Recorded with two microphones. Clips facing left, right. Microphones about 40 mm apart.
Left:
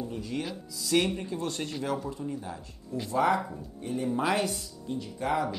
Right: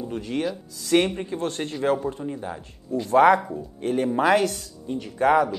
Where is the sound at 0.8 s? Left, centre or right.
Right.